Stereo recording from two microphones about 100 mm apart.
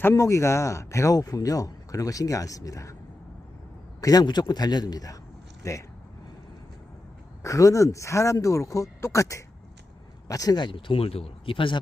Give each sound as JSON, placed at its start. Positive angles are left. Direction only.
{"t": 0.1, "sound": "speech", "side_deg": 35}
{"t": 4.0, "sound": "speech", "side_deg": 40}
{"t": 7.4, "sound": "speech", "side_deg": 35}